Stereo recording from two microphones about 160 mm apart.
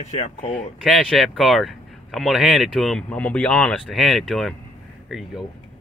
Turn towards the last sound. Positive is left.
turn(degrees=0)  # may be behind; listen again after turning